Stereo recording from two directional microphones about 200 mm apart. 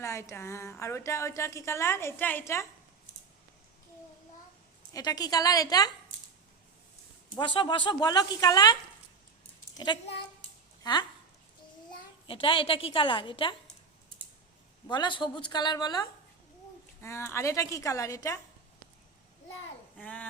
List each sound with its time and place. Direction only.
0.0 s a woman's voice: 15° left (ahead or behind)
4.9 s a woman's voice: 20° left (ahead or behind)
7.3 s a woman's voice: 25° left (ahead or behind)
12.3 s a woman's voice: 25° left (ahead or behind)
14.8 s a woman's voice: 20° left (ahead or behind)